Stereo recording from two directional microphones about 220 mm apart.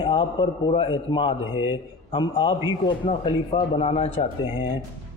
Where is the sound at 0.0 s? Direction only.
20° left (ahead or behind).